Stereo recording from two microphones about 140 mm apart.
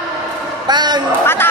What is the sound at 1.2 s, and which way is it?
Speech, 15° left (ahead or behind).